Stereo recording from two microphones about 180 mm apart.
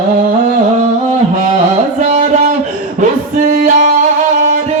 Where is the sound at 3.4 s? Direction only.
40° right (ahead or behind).